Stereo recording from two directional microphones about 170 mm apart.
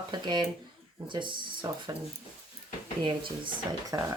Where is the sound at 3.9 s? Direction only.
15° right (ahead or behind).